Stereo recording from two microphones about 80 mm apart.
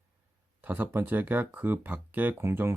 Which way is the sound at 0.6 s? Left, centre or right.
Right.